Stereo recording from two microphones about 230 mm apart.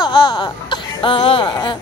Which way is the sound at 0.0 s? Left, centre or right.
Centre.